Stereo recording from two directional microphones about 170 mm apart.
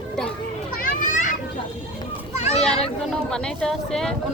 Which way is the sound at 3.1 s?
5° left (ahead or behind).